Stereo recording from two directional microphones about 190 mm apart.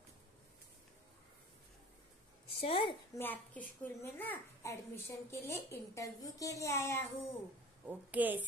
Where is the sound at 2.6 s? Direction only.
30° left (ahead or behind).